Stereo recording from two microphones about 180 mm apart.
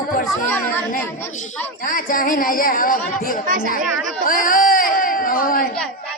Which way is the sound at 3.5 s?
50° right (ahead or behind).